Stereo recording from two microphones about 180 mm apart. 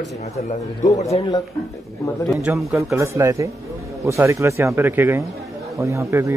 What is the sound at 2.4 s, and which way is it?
Speech, centre (ahead or behind).